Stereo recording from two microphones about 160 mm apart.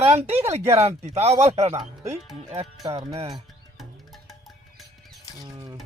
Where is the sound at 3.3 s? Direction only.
Centre (ahead or behind).